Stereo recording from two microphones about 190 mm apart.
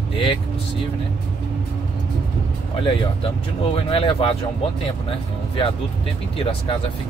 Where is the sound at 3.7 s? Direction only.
30° left (ahead or behind).